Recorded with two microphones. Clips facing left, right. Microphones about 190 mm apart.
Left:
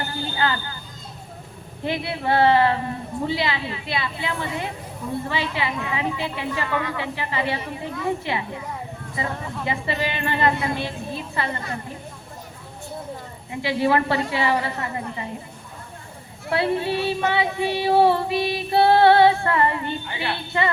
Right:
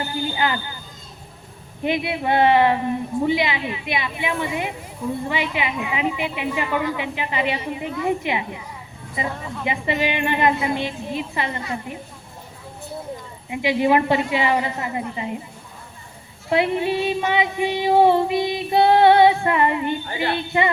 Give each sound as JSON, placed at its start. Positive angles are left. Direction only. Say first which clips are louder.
{"t": 0.0, "sound": "a sound", "louder": "right 2 dB", "side_deg": -15}
{"t": 1.8, "sound": "female singing", "louder": "right 3 dB", "side_deg": -20}
{"t": 9.6, "sound": "female singing", "louder": "right 4 dB", "side_deg": -20}
{"t": 13.5, "sound": "female singing", "louder": "right 3 dB", "side_deg": -20}
{"t": 16.5, "sound": "female singing", "louder": "right 2 dB", "side_deg": -20}
{"t": 20.5, "sound": "child singing", "louder": "right 2 dB", "side_deg": -20}